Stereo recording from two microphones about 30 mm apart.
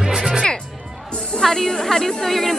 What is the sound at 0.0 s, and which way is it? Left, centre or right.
Music, centre.